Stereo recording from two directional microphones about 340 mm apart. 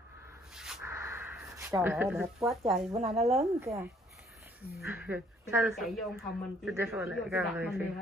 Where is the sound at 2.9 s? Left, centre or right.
Centre.